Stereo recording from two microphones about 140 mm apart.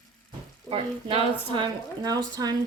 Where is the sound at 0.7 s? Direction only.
40° right (ahead or behind).